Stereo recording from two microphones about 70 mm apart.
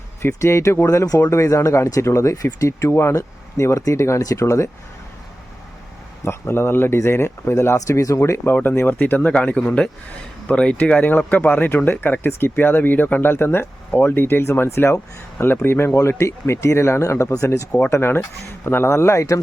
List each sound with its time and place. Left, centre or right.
0.2 s speech: left
1.0 s speech: left
1.3 s speech: left
6.2 s speech: left
8.4 s a man's voice: left